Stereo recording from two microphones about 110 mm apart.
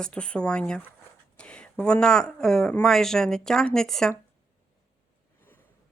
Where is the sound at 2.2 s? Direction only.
5° left (ahead or behind).